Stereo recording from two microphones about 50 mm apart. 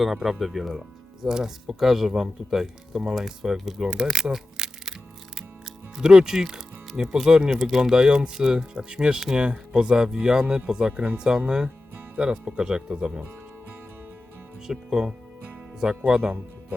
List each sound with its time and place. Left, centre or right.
0.0 s speech: centre
3.8 s music: centre
6.0 s speech: centre
7.5 s speech: centre
7.8 s speech: centre
14.7 s speech: centre